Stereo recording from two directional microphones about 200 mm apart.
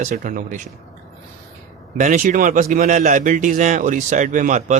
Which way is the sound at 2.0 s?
40° right (ahead or behind).